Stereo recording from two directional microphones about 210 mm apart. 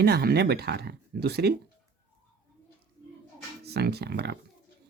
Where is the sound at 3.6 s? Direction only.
50° right (ahead or behind).